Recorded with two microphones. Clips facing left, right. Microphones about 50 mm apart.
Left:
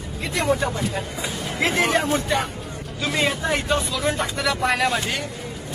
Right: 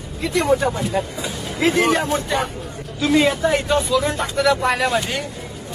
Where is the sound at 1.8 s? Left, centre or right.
Centre.